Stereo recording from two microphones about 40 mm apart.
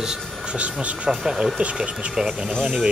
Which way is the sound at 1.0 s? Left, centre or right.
Centre.